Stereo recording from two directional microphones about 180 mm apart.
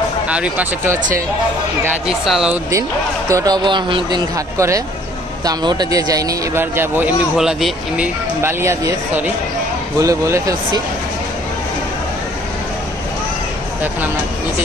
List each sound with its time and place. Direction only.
0.3 s speech: 10° right (ahead or behind)
3.3 s speech: 20° right (ahead or behind); by 8.1 s 5° right (ahead or behind)
8.4 s speech: 15° right (ahead or behind)